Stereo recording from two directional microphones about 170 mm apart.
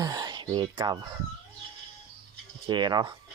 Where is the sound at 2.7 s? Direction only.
25° right (ahead or behind).